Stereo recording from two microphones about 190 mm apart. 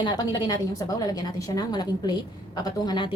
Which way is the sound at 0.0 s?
20° left (ahead or behind).